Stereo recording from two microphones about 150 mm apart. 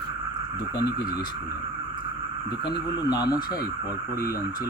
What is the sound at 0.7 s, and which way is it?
Speech, 25° left (ahead or behind).